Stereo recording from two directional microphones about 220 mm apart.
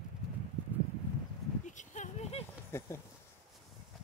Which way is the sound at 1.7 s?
35° left (ahead or behind).